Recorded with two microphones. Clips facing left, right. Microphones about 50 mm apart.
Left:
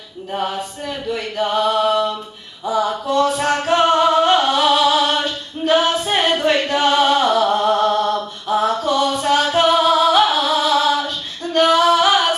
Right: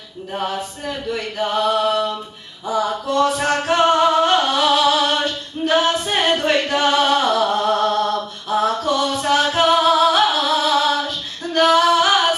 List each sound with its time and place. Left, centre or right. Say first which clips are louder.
0.3 s chant: left 1 dB; centre
2.6 s music: left 1 dB; centre
9.2 s music: even; centre